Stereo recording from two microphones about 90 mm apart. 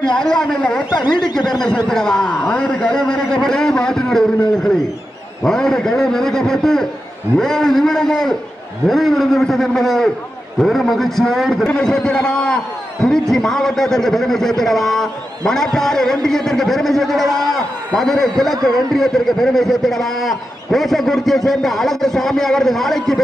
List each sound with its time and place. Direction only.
0.1 s a man's voice: 10° left (ahead or behind)
0.9 s speech: 55° left (ahead or behind)
1.9 s a man's voice: 5° left (ahead or behind)